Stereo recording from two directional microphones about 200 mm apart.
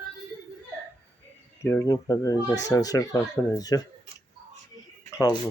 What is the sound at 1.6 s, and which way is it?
Speech, 15° left (ahead or behind).